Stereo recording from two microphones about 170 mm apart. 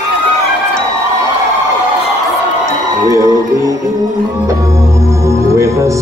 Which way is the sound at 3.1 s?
20° right (ahead or behind).